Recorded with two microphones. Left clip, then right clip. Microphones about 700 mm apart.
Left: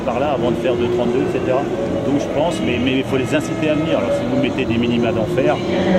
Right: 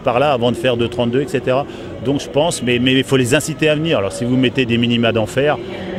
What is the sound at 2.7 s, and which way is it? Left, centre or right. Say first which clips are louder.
Speech: right 4 dB; right.